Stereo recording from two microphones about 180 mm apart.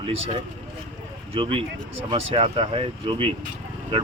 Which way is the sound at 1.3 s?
30° right (ahead or behind).